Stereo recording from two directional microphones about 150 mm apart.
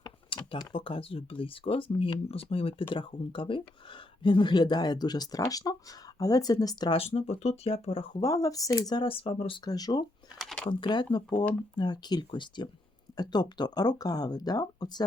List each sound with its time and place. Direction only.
0.0 s speech: 35° left (ahead or behind)
6.9 s speech: 40° left (ahead or behind)
8.2 s speech: 25° left (ahead or behind); by 9.6 s 40° left (ahead or behind)
9.6 s speech: 25° left (ahead or behind)
10.3 s a sound: 5° left (ahead or behind)
10.7 s speech: 30° left (ahead or behind)